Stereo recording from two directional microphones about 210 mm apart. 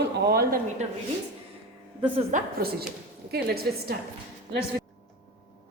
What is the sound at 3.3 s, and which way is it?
Speech, 50° right (ahead or behind).